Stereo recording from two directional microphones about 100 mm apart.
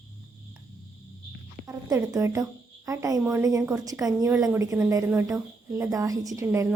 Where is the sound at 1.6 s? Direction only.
35° right (ahead or behind).